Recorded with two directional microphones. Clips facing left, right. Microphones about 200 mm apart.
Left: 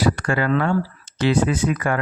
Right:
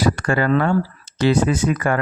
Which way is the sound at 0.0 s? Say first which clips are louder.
Right 2 dB; 45° right (ahead or behind).